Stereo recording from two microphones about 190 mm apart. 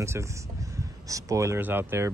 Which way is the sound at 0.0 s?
15° right (ahead or behind).